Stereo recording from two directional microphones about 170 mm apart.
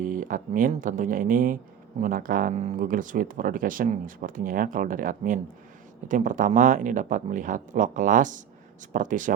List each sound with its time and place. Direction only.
0.0 s speech: 50° right (ahead or behind)